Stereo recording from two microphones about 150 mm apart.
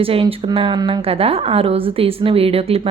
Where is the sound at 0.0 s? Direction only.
40° right (ahead or behind).